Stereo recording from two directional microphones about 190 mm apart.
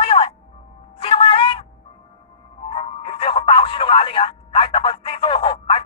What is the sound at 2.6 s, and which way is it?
Music, 30° left (ahead or behind).